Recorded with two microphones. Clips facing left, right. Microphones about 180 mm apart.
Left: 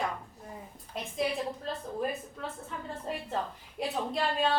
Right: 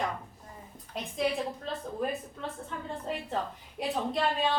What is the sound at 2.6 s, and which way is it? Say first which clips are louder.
A woman's voice: right 2 dB; centre (ahead or behind).